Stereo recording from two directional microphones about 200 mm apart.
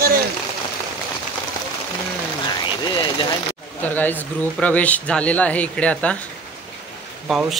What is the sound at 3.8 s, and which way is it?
Speech, 10° left (ahead or behind).